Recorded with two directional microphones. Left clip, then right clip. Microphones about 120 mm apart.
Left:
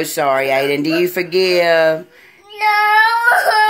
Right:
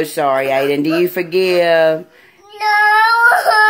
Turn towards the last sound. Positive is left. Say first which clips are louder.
# right 2 dB
turn(degrees=10)  # may be behind; listen again after turning